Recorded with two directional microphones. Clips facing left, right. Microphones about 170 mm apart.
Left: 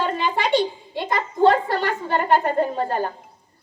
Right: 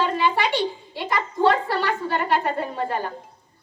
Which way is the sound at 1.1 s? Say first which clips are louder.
Left 3 dB; 45° left (ahead or behind).